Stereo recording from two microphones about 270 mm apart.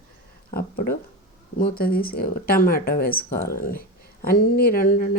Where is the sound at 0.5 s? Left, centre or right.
Left.